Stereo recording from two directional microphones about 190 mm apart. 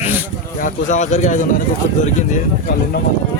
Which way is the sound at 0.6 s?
40° left (ahead or behind).